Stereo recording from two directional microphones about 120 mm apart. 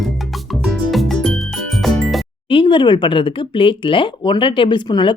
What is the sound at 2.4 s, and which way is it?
Speech, 45° left (ahead or behind).